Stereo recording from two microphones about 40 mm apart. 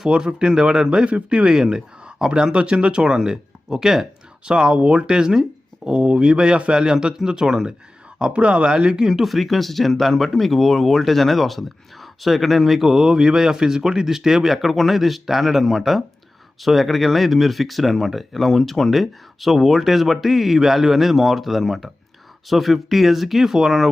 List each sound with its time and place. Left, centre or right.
0.1 s speech: centre
1.5 s speech: centre